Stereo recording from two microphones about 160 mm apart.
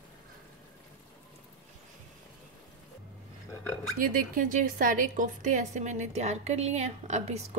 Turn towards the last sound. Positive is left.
turn(degrees=-45)  # may be behind; listen again after turning